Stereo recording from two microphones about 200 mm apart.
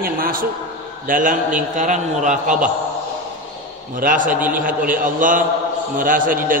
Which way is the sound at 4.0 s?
40° right (ahead or behind).